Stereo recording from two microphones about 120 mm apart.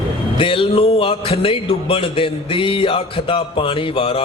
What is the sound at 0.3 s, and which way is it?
Speech, 45° left (ahead or behind).